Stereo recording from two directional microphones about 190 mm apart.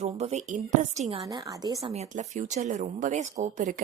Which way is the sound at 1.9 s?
35° right (ahead or behind).